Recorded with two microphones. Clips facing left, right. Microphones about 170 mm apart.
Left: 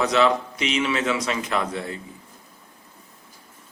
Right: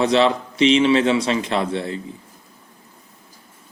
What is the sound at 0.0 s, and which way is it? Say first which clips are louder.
A man's voice: right 3 dB; 30° right (ahead or behind).